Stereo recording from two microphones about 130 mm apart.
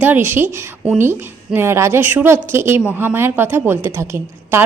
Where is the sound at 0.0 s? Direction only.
15° right (ahead or behind).